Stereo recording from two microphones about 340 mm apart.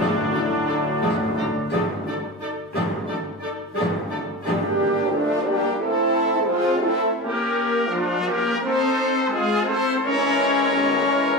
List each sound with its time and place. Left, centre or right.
7.7 s brass instrument: centre